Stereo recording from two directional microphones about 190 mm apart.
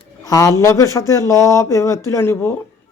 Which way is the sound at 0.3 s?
20° left (ahead or behind).